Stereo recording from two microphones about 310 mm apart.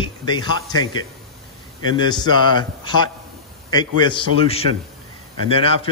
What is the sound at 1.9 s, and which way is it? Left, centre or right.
A man's voice, centre.